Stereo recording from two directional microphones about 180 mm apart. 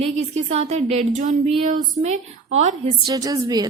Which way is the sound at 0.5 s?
35° right (ahead or behind).